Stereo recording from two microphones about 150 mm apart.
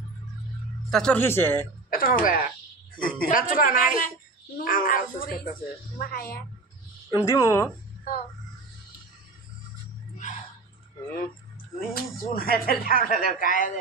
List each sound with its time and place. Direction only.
0.8 s speech: 5° left (ahead or behind)
1.9 s speech: 70° left (ahead or behind)
7.1 s speech: 20° left (ahead or behind)
11.9 s speech: 80° left